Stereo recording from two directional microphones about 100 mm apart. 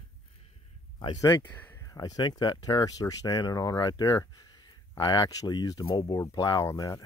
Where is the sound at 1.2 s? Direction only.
25° left (ahead or behind).